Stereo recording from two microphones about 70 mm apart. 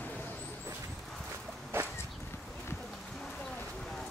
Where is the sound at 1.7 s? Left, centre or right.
Right.